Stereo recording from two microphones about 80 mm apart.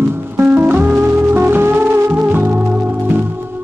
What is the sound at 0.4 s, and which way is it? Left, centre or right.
Music, right.